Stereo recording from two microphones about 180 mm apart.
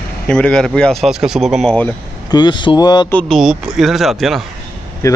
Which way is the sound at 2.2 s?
25° left (ahead or behind).